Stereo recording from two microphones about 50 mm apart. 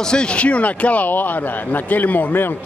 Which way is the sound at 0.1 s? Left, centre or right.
Centre.